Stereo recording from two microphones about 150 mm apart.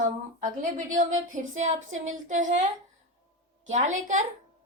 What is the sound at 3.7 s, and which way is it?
Speech, 50° right (ahead or behind).